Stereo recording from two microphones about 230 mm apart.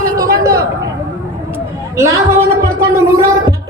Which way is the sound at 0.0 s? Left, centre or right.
Centre.